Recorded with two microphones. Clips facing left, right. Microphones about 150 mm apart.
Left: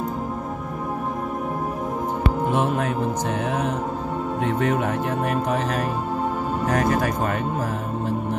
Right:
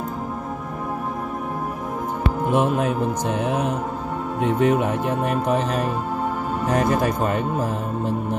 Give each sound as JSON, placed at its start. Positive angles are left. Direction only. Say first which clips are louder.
{"t": 2.5, "sound": "speech", "louder": "right 2 dB", "side_deg": -15}